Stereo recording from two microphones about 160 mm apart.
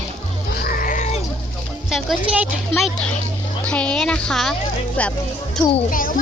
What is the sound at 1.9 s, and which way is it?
A woman's voice, centre (ahead or behind).